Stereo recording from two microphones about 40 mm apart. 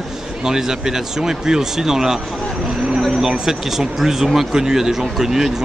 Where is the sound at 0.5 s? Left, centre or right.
Centre.